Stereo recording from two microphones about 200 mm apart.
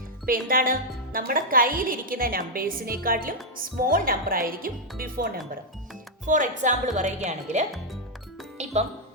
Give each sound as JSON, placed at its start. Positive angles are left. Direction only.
{"t": 0.3, "sound": "a woman's voice", "side_deg": -45}